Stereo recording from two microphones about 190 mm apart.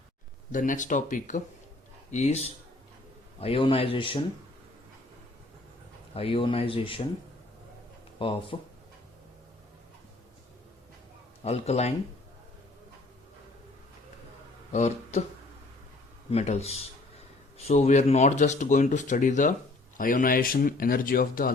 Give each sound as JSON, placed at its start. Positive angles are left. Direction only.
{"t": 0.5, "sound": "speech", "side_deg": 45}
{"t": 6.1, "sound": "speech", "side_deg": 30}
{"t": 8.2, "sound": "speech", "side_deg": 30}
{"t": 11.4, "sound": "speech", "side_deg": 35}
{"t": 14.7, "sound": "speech", "side_deg": 35}
{"t": 16.3, "sound": "speech", "side_deg": 35}